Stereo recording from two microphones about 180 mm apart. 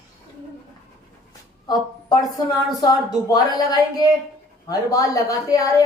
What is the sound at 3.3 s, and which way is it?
A woman's voice, 20° left (ahead or behind).